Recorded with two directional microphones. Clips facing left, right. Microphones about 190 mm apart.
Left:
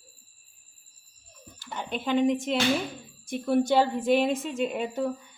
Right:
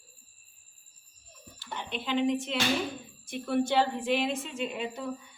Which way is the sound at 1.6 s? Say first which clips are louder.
Left 4 dB; 45° left (ahead or behind).